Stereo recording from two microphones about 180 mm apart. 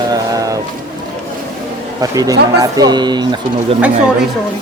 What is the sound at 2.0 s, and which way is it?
Speech, 20° right (ahead or behind).